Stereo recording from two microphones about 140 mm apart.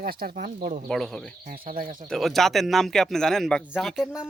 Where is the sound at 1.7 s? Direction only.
80° right.